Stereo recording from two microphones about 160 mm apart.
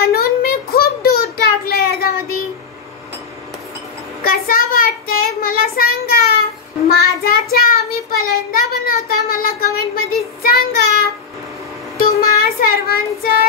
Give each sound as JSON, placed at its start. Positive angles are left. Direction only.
{"t": 0.0, "sound": "a sound", "side_deg": 70}
{"t": 1.7, "sound": "child singing", "side_deg": 70}
{"t": 4.2, "sound": "child singing", "side_deg": 70}